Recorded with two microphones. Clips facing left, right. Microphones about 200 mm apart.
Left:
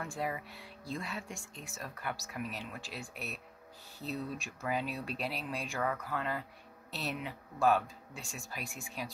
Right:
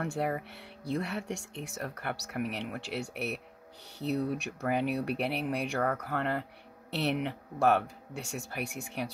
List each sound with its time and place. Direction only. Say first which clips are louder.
0.0 s speech: right 6 dB; 65° right (ahead or behind)
5.8 s speech: right 2 dB; 45° right (ahead or behind)
6.0 s speech: right 5 dB; 65° right (ahead or behind)